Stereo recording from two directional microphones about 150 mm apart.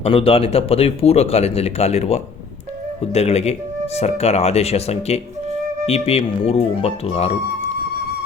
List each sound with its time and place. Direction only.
0.0 s speech: 40° left (ahead or behind)